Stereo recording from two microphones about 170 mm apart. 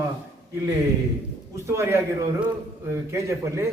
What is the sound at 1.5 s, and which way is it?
A man's voice, 15° right (ahead or behind).